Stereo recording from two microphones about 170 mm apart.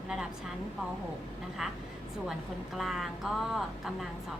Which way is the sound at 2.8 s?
Centre (ahead or behind).